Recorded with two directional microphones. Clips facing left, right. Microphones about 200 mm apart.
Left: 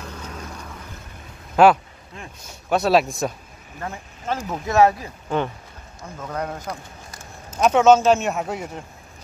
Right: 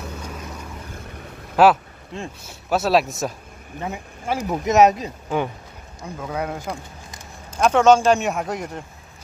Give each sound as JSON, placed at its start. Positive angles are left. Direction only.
{"t": 0.0, "sound": "vehicle", "side_deg": -5}
{"t": 1.6, "sound": "speech", "side_deg": -5}
{"t": 2.1, "sound": "speech", "side_deg": -25}
{"t": 2.7, "sound": "speech", "side_deg": 0}
{"t": 3.8, "sound": "speech", "side_deg": -15}
{"t": 7.5, "sound": "speech", "side_deg": 5}